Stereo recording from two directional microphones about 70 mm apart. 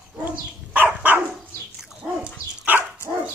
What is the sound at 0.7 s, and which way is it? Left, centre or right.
Dog, right.